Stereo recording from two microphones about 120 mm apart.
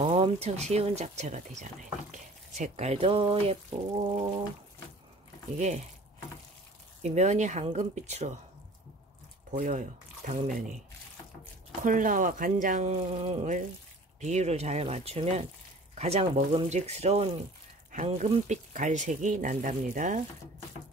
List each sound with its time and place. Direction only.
0.1 s speech: 65° right (ahead or behind)
4.0 s a sound: 50° right (ahead or behind)
5.6 s speech: 70° right (ahead or behind)
7.0 s speech: 70° right (ahead or behind)
9.5 s speech: 90° right
11.8 s speech: 90° right; by 17.3 s 65° right (ahead or behind)
17.9 s speech: 75° right (ahead or behind); by 20.2 s 90° right